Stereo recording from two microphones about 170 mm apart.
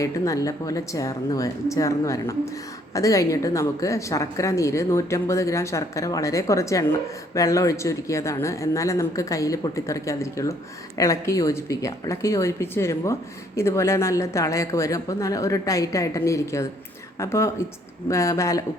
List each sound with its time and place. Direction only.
0.0 s a woman's voice: 20° left (ahead or behind)